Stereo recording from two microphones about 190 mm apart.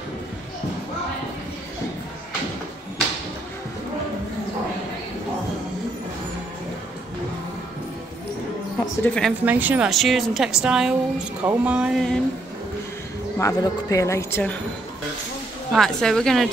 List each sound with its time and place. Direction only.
9.0 s a woman's voice: 5° left (ahead or behind)
9.4 s a woman's voice: 10° right (ahead or behind)
13.4 s speech: 15° left (ahead or behind)
15.7 s a woman's voice: centre (ahead or behind)